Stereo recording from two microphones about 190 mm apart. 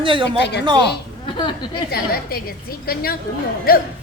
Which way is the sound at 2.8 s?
55° left (ahead or behind).